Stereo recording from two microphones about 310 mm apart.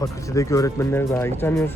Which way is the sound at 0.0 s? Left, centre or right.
Centre.